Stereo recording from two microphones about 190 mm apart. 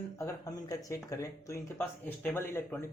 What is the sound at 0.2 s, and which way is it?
Speech, 20° left (ahead or behind).